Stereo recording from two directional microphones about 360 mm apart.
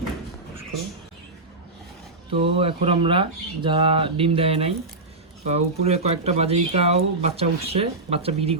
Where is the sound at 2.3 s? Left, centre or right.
Centre.